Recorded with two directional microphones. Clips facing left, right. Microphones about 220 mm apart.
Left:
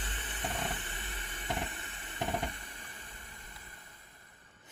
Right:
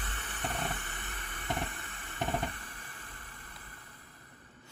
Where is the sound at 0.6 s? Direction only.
25° left (ahead or behind).